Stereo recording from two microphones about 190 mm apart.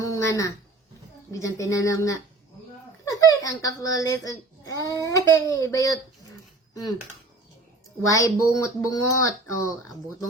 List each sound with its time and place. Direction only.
0.0 s a sound: 15° left (ahead or behind)
1.3 s a child's voice: 15° left (ahead or behind)
8.0 s a child's voice: 15° left (ahead or behind)